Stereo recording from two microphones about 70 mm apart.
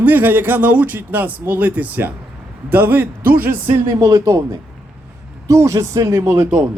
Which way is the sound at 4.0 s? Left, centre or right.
Right.